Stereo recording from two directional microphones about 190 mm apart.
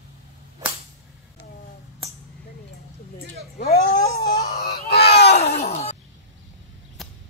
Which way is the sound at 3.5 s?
55° left (ahead or behind).